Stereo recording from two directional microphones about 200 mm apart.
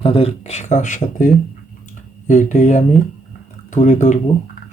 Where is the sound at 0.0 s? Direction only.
30° left (ahead or behind).